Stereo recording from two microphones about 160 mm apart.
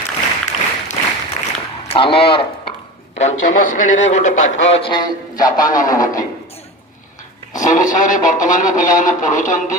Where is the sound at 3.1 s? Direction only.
45° left (ahead or behind).